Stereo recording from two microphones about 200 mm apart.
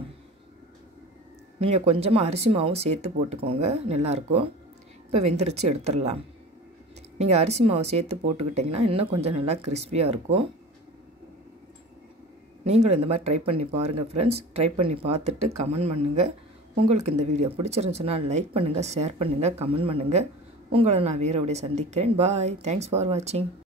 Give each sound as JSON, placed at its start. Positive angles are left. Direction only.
{"t": 1.6, "sound": "speech", "side_deg": -30}
{"t": 7.2, "sound": "speech", "side_deg": -30}
{"t": 12.6, "sound": "speech", "side_deg": -30}